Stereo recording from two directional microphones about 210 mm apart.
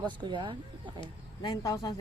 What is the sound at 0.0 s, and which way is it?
Speech, 20° right (ahead or behind).